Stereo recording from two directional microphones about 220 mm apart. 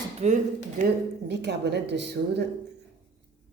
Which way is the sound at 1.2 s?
50° right (ahead or behind).